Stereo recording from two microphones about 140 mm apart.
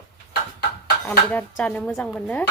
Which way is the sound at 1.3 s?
10° left (ahead or behind).